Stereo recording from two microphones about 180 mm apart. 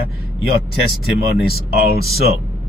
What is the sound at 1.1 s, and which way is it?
A man's voice, 60° left (ahead or behind).